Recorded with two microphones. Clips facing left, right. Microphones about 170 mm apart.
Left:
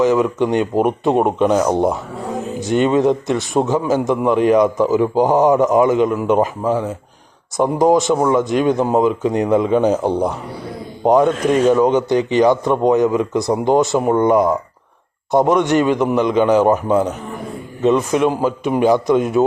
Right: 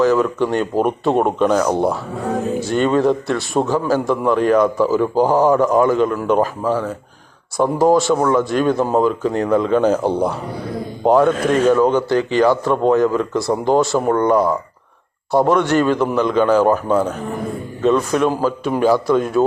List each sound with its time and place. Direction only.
0.0 s speech: 20° left (ahead or behind)